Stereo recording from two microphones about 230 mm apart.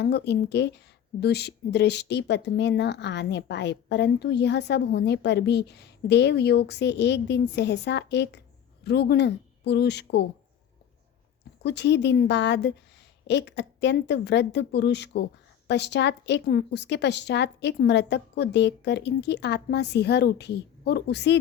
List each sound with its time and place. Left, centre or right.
0.0 s a woman's voice: left
11.6 s a woman's voice: left